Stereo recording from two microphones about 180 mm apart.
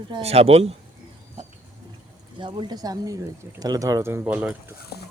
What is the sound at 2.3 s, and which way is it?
Speech, 25° right (ahead or behind).